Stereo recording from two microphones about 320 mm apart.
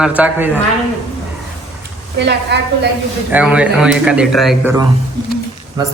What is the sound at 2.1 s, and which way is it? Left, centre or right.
Speech, right.